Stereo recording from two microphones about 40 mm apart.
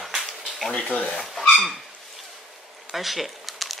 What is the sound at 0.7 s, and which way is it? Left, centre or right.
Speech, left.